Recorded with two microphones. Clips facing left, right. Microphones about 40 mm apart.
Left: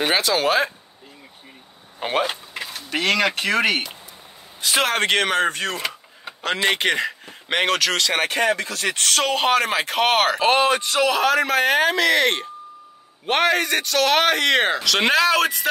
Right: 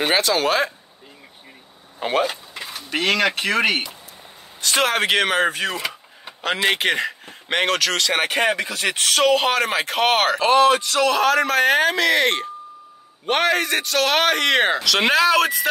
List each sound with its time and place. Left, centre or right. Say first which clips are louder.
0.0 s speech: right 1 dB; centre
2.0 s speech: right 2 dB; centre
2.7 s speech: even; centre
8.5 s speech: right 1 dB; centre
10.7 s speech: right 2 dB; centre
11.1 s speech: right 2 dB; centre